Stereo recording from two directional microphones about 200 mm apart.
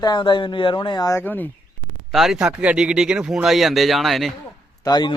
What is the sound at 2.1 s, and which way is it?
A man's voice, centre (ahead or behind).